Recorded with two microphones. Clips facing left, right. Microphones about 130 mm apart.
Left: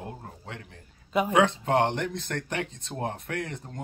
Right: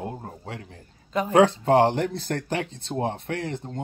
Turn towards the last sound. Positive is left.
turn(degrees=-30)  # may be behind; listen again after turning